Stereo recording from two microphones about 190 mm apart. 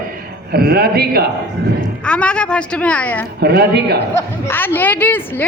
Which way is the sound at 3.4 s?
55° right (ahead or behind).